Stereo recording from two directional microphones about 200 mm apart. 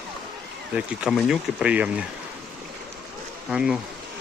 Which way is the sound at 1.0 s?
5° right (ahead or behind).